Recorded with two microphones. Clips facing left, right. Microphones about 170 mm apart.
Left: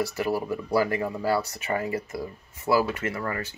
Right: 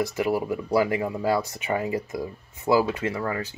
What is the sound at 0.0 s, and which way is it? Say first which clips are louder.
Speech: right 2 dB; 15° right (ahead or behind).